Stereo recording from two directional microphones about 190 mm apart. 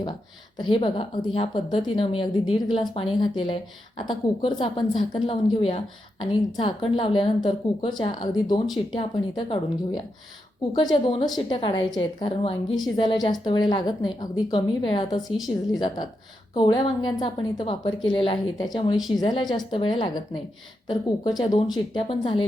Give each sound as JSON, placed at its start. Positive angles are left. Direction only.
{"t": 0.6, "sound": "a woman's voice", "side_deg": 25}